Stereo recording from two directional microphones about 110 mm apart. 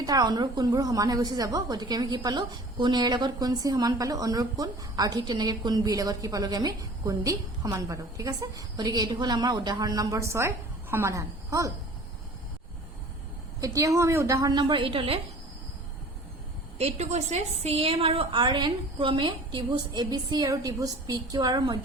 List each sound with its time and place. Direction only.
0.0 s a woman's voice: 35° right (ahead or behind)
13.6 s a woman's voice: 30° right (ahead or behind)
14.5 s a woman's voice: 45° right (ahead or behind)
16.7 s a woman's voice: 80° right; by 21.8 s 35° right (ahead or behind)